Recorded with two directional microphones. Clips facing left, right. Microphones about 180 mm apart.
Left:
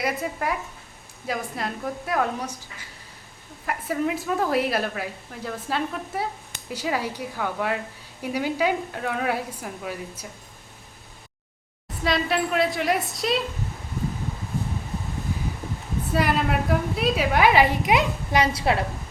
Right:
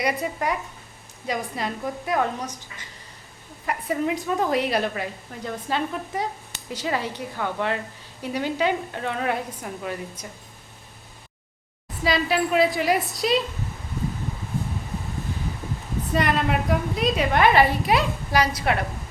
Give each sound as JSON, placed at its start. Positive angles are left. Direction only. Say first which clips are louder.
{"t": 0.0, "sound": "a woman's voice", "louder": "right 1 dB", "side_deg": 0}
{"t": 12.0, "sound": "a woman's voice", "louder": "right 1 dB", "side_deg": 0}
{"t": 16.1, "sound": "a woman's voice", "louder": "even", "side_deg": 5}